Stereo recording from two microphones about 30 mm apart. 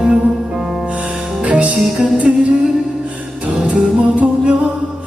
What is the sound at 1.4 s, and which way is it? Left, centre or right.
Music, right.